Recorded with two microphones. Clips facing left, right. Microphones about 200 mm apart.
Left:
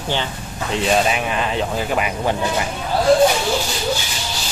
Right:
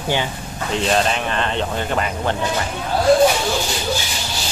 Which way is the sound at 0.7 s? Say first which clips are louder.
Left 1 dB; 5° left (ahead or behind).